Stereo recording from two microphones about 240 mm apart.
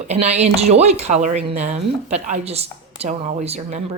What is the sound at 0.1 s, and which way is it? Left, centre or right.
Speech, right.